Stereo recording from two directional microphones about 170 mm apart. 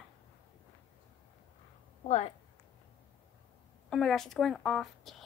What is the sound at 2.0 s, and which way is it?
Speech, 40° left (ahead or behind).